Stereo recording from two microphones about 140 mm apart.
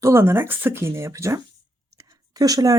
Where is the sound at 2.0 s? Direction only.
25° right (ahead or behind).